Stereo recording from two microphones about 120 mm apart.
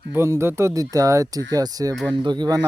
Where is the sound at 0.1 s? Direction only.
20° right (ahead or behind).